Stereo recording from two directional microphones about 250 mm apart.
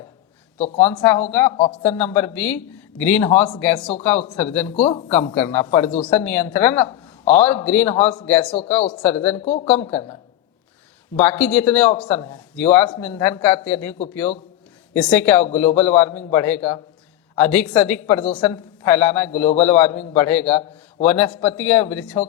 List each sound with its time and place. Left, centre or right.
0.8 s a woman's voice: centre
9.4 s speech: left
9.6 s a woman's voice: centre
11.2 s a woman's voice: centre